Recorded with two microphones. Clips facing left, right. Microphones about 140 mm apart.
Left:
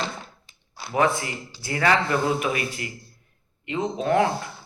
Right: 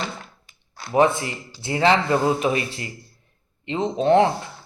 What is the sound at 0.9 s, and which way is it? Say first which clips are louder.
Speech: right 4 dB; 25° right (ahead or behind).